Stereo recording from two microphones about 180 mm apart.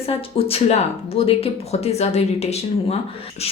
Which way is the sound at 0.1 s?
30° left (ahead or behind).